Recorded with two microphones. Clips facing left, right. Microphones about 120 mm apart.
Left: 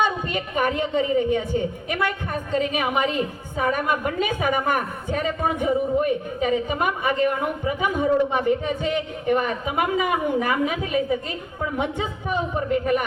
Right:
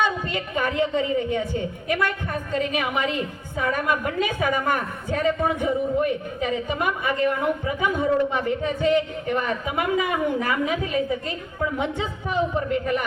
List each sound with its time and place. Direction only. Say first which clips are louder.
0.0 s a woman's voice: left 1 dB; 15° left (ahead or behind)